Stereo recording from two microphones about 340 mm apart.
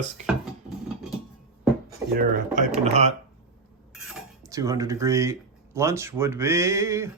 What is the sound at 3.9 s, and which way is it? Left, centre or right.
Cutlery, centre.